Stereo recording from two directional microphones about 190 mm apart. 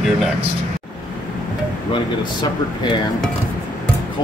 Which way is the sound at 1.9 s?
25° left (ahead or behind).